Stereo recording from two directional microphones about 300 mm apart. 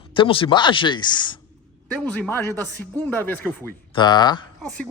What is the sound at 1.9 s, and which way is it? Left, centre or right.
Speech, centre.